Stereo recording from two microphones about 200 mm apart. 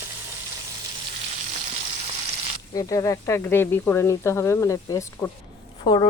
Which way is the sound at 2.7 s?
15° left (ahead or behind).